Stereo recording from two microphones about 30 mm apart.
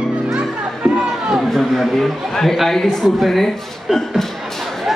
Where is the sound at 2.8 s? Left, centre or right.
Centre.